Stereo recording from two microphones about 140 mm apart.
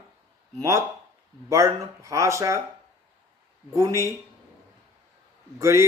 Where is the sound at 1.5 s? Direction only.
20° right (ahead or behind).